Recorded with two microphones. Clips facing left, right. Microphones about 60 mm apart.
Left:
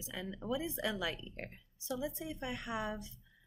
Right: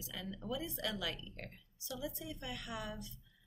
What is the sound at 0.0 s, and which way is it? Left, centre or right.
A woman's voice, left.